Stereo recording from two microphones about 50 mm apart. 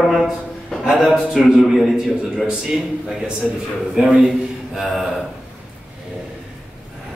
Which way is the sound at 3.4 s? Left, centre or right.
Centre.